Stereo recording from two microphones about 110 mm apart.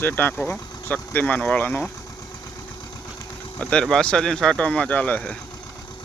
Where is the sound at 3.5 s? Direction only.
5° left (ahead or behind).